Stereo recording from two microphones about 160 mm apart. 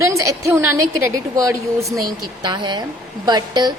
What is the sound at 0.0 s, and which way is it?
A woman's voice, 20° right (ahead or behind).